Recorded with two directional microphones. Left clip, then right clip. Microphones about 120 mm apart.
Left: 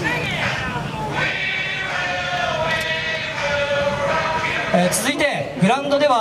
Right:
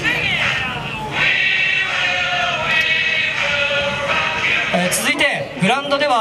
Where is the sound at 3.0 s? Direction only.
15° right (ahead or behind).